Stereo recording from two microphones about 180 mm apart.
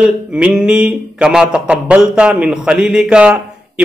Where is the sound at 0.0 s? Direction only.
5° right (ahead or behind).